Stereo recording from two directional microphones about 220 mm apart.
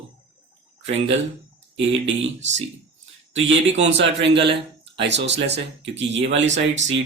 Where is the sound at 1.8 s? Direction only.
55° right (ahead or behind).